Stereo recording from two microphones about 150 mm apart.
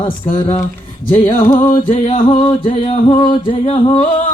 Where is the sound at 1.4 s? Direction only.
35° left (ahead or behind).